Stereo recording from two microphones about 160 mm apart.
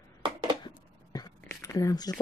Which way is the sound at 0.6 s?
25° left (ahead or behind).